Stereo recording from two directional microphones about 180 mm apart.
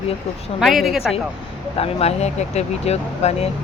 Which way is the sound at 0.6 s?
Centre (ahead or behind).